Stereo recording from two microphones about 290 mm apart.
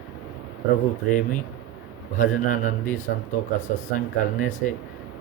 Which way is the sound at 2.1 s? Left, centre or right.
Left.